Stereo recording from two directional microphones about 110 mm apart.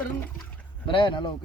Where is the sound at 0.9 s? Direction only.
50° left (ahead or behind).